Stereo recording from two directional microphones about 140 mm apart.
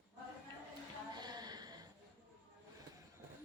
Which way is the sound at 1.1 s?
30° right (ahead or behind).